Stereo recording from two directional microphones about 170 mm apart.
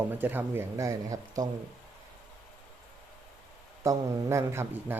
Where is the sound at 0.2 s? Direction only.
10° right (ahead or behind).